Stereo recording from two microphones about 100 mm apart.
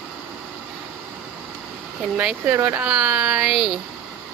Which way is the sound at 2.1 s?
15° right (ahead or behind).